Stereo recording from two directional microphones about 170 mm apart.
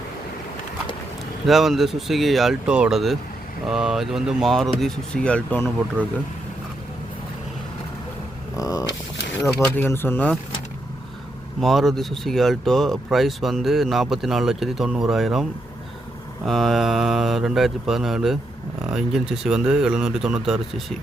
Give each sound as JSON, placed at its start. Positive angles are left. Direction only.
{"t": 1.5, "sound": "speech", "side_deg": 0}
{"t": 8.5, "sound": "a sound", "side_deg": 20}
{"t": 9.6, "sound": "speech", "side_deg": 10}
{"t": 11.6, "sound": "speech", "side_deg": 0}